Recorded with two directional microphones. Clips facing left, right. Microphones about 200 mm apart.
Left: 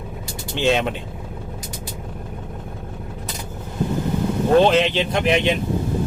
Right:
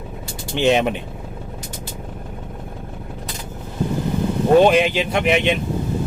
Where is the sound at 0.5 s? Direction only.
15° right (ahead or behind).